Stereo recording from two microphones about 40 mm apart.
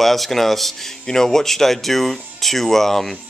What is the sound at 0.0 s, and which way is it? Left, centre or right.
Speech, centre.